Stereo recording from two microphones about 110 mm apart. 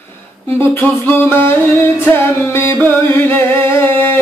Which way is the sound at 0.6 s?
20° left (ahead or behind).